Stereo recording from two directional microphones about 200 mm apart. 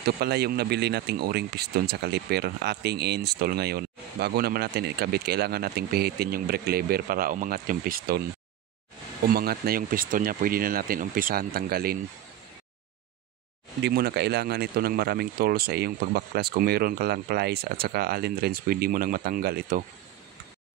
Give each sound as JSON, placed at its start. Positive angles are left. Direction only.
{"t": 0.0, "sound": "speech", "side_deg": -55}
{"t": 9.2, "sound": "speech", "side_deg": -50}
{"t": 13.7, "sound": "speech", "side_deg": -55}